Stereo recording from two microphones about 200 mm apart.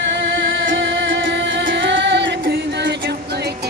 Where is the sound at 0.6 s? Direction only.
70° right (ahead or behind).